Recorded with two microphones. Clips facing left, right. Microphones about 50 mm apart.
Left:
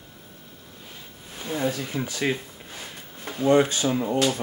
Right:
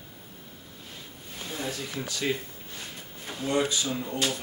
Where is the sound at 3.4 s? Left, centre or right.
Left.